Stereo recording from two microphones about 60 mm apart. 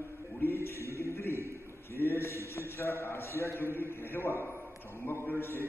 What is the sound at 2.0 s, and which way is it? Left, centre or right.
A man's voice, left.